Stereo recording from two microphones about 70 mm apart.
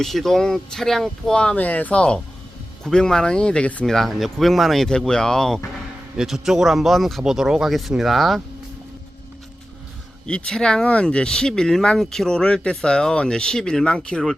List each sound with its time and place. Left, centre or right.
0.0 s speech: centre
1.4 s speech: centre
3.8 s speech: centre
6.1 s speech: centre
10.2 s speech: centre